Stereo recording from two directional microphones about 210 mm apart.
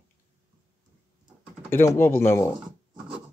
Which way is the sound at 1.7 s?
10° left (ahead or behind).